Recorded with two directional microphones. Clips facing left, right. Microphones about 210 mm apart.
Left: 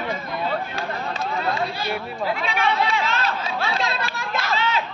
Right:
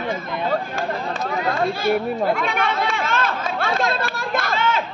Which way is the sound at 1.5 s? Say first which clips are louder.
Right 7 dB; 50° right (ahead or behind).